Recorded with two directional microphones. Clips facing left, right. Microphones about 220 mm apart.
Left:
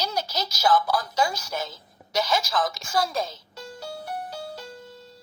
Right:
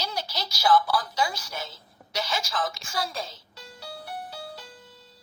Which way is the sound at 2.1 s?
45° left (ahead or behind).